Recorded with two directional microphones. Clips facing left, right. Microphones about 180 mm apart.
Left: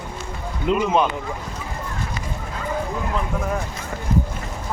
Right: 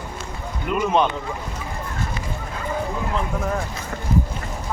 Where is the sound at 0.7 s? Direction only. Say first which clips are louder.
Left 4 dB; 25° left (ahead or behind).